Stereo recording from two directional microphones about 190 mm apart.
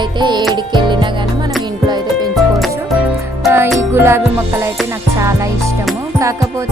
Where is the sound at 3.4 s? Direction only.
15° right (ahead or behind).